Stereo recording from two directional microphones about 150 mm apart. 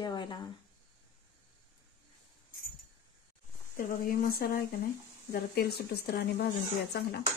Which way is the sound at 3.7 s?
70° left (ahead or behind).